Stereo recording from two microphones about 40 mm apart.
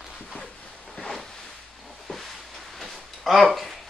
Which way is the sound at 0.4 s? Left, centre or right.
Centre.